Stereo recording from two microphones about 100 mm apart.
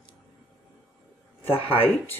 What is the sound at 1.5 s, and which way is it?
Speech, 65° left (ahead or behind).